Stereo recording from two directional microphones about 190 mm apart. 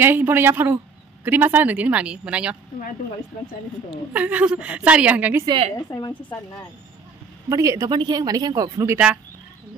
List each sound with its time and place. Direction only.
0.0 s speech: 10° right (ahead or behind)
4.1 s speech: 10° right (ahead or behind)
5.8 s a woman's voice: 20° left (ahead or behind)
7.4 s speech: 15° right (ahead or behind)